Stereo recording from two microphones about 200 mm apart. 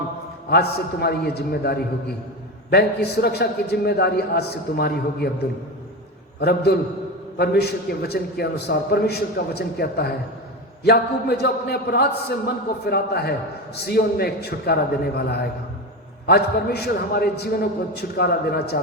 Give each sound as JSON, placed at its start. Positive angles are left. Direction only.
{"t": 0.5, "sound": "a man's voice", "side_deg": 55}
{"t": 6.4, "sound": "a man's voice", "side_deg": 55}